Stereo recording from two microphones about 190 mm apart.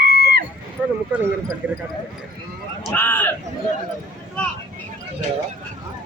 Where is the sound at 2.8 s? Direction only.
10° left (ahead or behind).